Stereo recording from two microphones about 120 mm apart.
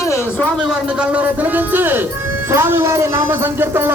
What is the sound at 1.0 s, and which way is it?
A woman's voice, 15° right (ahead or behind).